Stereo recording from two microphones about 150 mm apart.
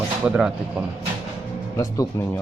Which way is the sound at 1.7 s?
20° left (ahead or behind).